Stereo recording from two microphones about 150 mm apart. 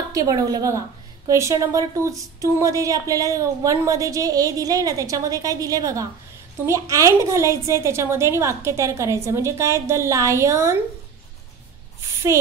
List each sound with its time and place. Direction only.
0.1 s a woman's voice: 25° right (ahead or behind)